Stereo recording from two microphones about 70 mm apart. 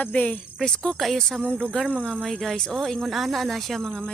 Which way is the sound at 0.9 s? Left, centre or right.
Centre.